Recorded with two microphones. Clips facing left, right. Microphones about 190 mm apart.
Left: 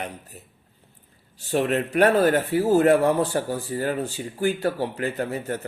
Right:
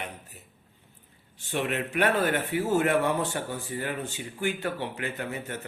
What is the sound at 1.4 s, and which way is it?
A man's voice, 35° left (ahead or behind).